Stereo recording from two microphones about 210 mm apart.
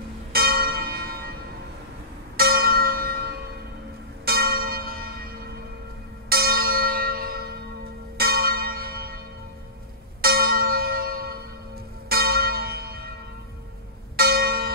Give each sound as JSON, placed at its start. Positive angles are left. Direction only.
{"t": 0.3, "sound": "church bell", "side_deg": -45}
{"t": 2.3, "sound": "church bell", "side_deg": -45}
{"t": 10.2, "sound": "church bell", "side_deg": -45}
{"t": 14.1, "sound": "church bell", "side_deg": -50}